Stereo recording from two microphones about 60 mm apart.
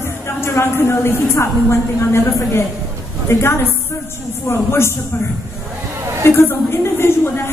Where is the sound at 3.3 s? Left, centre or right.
Left.